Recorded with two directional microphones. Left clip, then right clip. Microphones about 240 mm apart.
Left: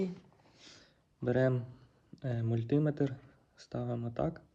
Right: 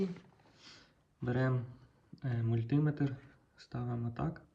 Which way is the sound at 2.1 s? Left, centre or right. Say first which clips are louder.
Left 2 dB; left.